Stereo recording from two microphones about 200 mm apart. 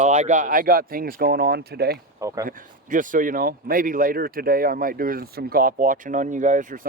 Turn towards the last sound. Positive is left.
turn(degrees=-40)  # may be behind; listen again after turning